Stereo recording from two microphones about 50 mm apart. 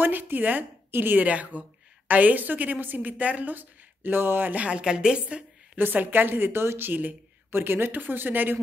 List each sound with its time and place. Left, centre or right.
0.0 s a woman's voice: right
1.2 s a woman's voice: right
4.6 s a woman's voice: centre
5.8 s a woman's voice: right
6.9 s a woman's voice: right
7.5 s a woman's voice: right